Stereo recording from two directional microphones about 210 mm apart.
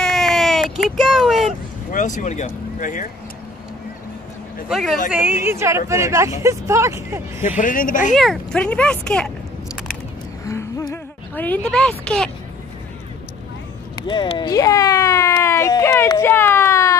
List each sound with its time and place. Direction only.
0.0 s a sound: centre (ahead or behind)
1.9 s speech: 35° left (ahead or behind)
4.6 s speech: centre (ahead or behind)
5.4 s speech: 10° right (ahead or behind)
7.4 s speech: 35° left (ahead or behind)
8.2 s speech: centre (ahead or behind)
10.4 s a sound: 15° left (ahead or behind)
12.0 s speech: 5° left (ahead or behind)
13.9 s a sound: 20° left (ahead or behind)